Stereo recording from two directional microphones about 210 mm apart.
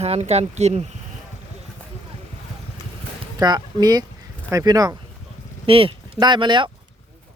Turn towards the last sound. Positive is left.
turn(degrees=-20)  # may be behind; listen again after turning